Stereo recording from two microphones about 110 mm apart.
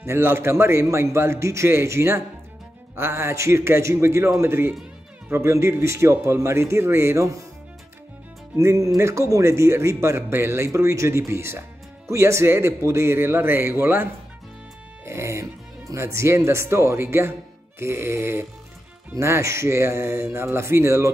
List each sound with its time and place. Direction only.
0.0 s speech: 20° right (ahead or behind)
8.5 s speech: 30° right (ahead or behind)
15.0 s speech: 25° right (ahead or behind)